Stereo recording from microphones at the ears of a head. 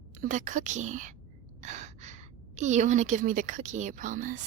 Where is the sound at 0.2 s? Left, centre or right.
Right.